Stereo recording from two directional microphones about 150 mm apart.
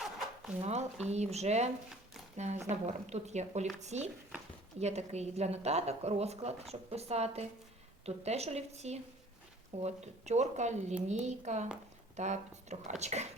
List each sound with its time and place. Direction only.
0.6 s a woman's voice: 45° right (ahead or behind)